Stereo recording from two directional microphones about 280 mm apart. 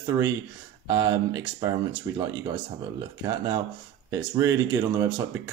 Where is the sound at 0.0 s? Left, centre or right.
Centre.